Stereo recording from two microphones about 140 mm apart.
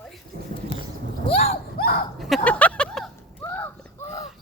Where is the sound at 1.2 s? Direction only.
45° left (ahead or behind).